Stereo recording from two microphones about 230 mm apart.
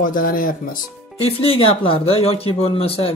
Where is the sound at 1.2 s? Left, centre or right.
Left.